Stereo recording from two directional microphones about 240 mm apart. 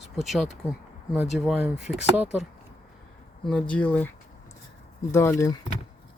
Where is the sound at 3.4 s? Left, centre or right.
Centre.